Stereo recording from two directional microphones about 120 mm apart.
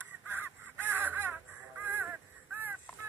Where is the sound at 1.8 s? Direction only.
15° right (ahead or behind).